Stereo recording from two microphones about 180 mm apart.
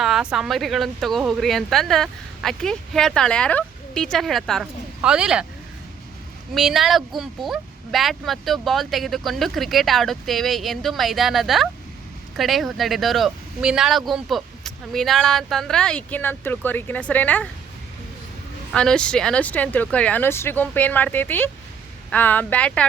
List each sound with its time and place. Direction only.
0.0 s speech: 5° right (ahead or behind)
6.5 s speech: centre (ahead or behind)
18.7 s speech: 5° left (ahead or behind)